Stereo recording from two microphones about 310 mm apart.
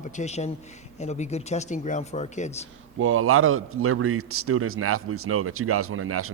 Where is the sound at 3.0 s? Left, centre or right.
Right.